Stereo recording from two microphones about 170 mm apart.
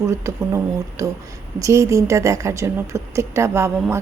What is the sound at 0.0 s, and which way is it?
A woman's voice, 15° right (ahead or behind).